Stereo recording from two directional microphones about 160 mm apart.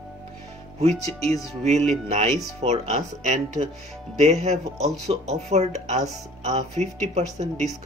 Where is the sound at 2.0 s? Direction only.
45° right (ahead or behind).